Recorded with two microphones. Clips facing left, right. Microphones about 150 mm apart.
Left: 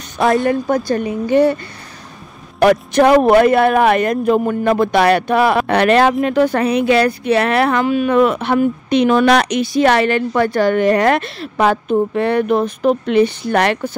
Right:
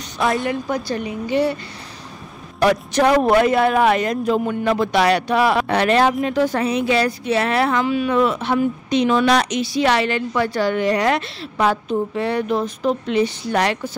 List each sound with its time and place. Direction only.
0.5 s speech: 45° left (ahead or behind)
2.6 s speech: 55° left (ahead or behind)